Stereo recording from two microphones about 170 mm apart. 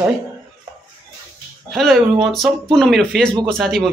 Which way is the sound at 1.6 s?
Centre (ahead or behind).